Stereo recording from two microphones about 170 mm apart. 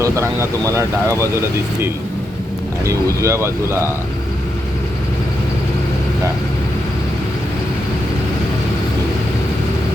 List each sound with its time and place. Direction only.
0.0 s speech: 15° right (ahead or behind)
2.8 s speech: 20° right (ahead or behind)